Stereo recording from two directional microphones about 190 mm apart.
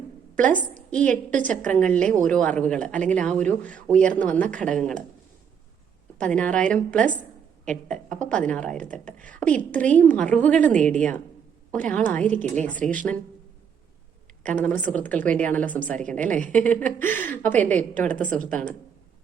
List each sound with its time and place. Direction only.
0.3 s a woman's voice: 5° left (ahead or behind)
6.1 s a woman's voice: 5° left (ahead or behind)
14.5 s a woman's voice: 10° left (ahead or behind)